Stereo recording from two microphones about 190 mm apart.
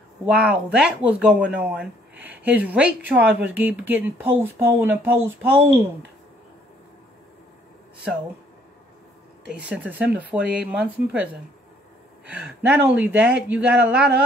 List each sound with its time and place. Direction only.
0.3 s a woman's voice: 5° right (ahead or behind)
9.5 s a woman's voice: 5° right (ahead or behind)
12.3 s a woman's voice: 10° right (ahead or behind)